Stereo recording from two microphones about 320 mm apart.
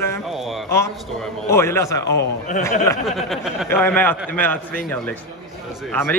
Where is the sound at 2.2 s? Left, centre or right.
Left.